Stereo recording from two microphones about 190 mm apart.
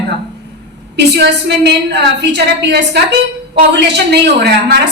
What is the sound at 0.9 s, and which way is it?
A woman's voice, 65° right (ahead or behind).